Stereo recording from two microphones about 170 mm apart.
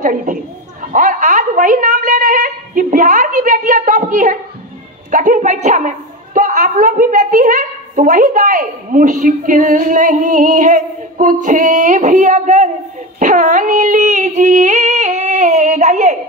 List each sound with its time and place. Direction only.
0.0 s a woman's voice: 50° right (ahead or behind)